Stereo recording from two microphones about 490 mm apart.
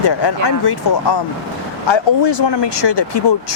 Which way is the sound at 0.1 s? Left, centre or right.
Left.